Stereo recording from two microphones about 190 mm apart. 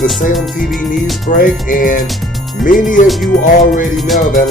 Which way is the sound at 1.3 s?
45° left (ahead or behind).